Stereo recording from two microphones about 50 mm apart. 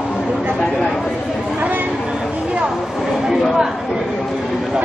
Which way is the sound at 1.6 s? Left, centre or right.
Right.